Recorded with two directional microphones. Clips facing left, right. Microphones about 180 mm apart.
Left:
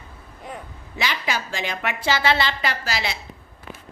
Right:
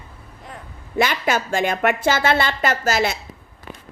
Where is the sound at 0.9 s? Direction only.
50° right (ahead or behind).